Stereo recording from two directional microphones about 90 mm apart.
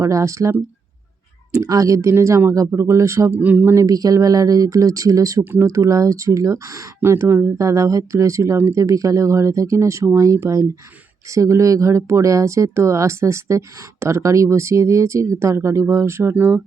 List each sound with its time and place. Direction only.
0.0 s speech: 35° right (ahead or behind)
1.6 s speech: 40° right (ahead or behind)
3.3 s speech: 20° right (ahead or behind)
3.8 s speech: 40° right (ahead or behind)